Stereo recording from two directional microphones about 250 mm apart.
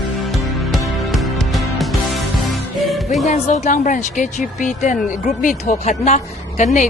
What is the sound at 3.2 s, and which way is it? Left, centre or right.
A woman's voice, left.